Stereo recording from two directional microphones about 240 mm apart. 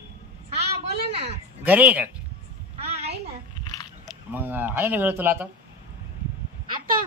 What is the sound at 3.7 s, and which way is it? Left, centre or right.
Biting, centre.